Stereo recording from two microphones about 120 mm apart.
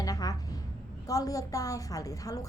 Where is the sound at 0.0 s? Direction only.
30° left (ahead or behind).